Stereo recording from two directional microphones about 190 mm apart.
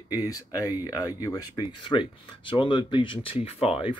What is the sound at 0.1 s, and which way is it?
Speech, 20° left (ahead or behind).